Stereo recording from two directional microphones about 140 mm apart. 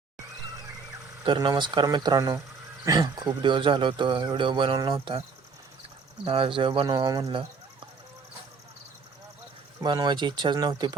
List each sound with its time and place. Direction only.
1.2 s speech: 35° right (ahead or behind)
6.2 s speech: 40° right (ahead or behind)
9.8 s speech: 30° right (ahead or behind)